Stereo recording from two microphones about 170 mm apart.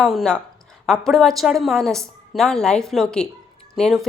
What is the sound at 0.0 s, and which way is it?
Speech, centre (ahead or behind).